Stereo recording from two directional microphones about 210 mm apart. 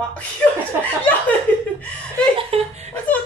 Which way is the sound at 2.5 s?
30° right (ahead or behind).